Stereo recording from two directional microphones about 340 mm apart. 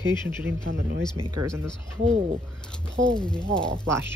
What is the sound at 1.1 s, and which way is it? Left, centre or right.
Speech, centre.